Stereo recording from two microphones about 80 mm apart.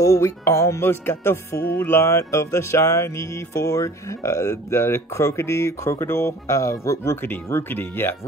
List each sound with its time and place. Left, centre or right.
0.0 s music: left
7.4 s speech: left